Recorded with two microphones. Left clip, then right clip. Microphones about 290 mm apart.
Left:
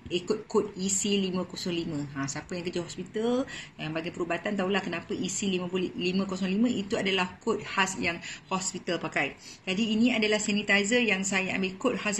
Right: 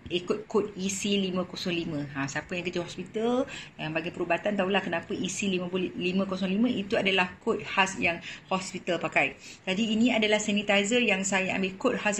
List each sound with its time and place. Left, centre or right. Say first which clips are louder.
0.1 s a man's voice: even; centre
0.7 s a woman's voice: left 1 dB; left
2.7 s a man's voice: right 1 dB; centre